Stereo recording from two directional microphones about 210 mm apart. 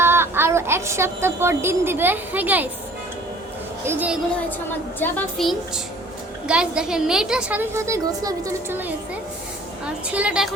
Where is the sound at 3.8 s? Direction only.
5° right (ahead or behind).